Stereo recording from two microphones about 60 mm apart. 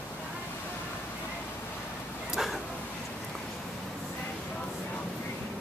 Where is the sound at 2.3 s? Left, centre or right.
Centre.